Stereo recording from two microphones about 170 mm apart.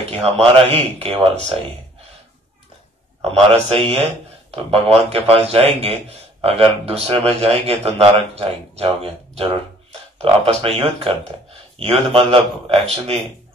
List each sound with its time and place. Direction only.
0.1 s a man's voice: 5° left (ahead or behind)
0.7 s a man's voice: 35° right (ahead or behind)
3.3 s a man's voice: 35° right (ahead or behind)